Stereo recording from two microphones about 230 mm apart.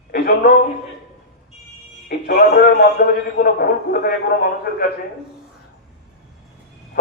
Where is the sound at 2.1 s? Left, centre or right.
Left.